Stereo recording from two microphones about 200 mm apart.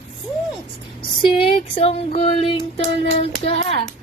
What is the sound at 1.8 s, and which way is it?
Child singing, 30° left (ahead or behind).